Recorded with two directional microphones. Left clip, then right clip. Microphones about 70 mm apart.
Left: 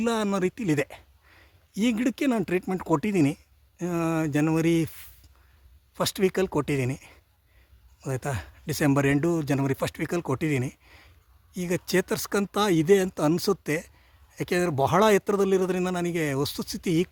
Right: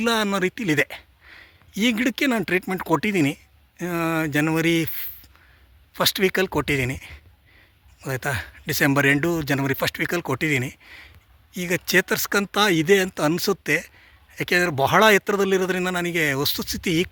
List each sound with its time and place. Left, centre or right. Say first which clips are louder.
0.0 s a man's voice: right 4 dB; left